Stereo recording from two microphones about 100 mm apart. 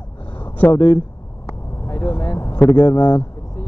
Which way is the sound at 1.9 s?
40° left (ahead or behind).